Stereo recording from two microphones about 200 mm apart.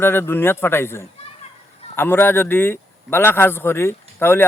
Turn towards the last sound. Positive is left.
turn(degrees=10)  # may be behind; listen again after turning